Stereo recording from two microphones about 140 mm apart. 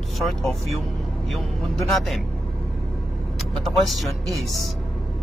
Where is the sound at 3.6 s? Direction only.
Centre (ahead or behind).